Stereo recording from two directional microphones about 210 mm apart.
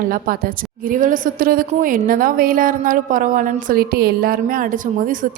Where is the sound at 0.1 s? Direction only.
40° right (ahead or behind).